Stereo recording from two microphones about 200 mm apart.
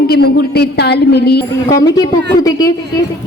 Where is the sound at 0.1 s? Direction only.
50° left (ahead or behind).